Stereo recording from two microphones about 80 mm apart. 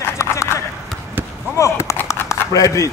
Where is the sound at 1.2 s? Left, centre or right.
Right.